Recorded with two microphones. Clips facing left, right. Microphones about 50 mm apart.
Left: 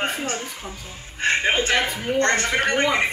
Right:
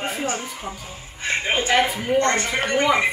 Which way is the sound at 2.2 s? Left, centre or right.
Left.